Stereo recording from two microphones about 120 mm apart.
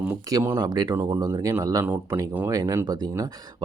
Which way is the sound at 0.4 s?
25° right (ahead or behind).